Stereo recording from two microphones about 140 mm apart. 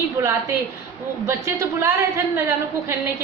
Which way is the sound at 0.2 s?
20° right (ahead or behind).